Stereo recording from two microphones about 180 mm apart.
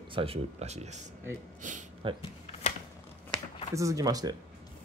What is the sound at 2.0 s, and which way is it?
Speech, 30° right (ahead or behind).